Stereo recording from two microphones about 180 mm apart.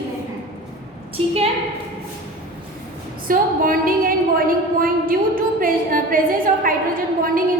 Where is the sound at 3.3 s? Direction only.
50° right (ahead or behind).